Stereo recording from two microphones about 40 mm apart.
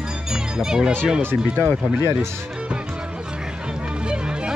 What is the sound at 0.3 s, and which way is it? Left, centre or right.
Speech, centre.